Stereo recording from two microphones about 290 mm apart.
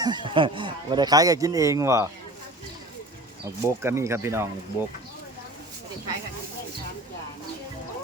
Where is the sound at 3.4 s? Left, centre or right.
Centre.